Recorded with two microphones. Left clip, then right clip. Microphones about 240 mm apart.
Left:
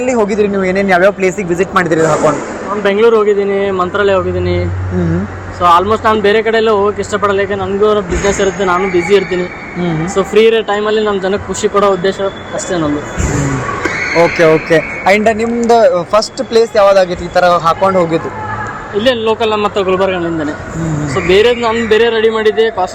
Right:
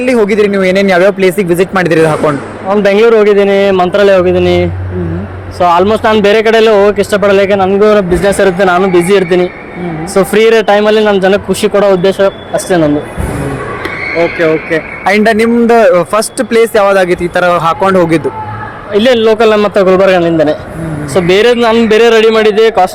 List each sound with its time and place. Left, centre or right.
0.3 s a man's voice: right
14.4 s speech: left
15.0 s a man's voice: right